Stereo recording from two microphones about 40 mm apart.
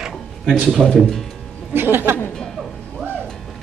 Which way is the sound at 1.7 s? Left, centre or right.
Right.